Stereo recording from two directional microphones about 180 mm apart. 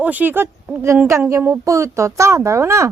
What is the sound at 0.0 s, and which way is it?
Speech, 10° right (ahead or behind).